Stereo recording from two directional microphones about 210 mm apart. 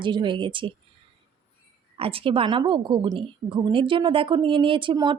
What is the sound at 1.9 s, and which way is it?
Speech, 25° right (ahead or behind).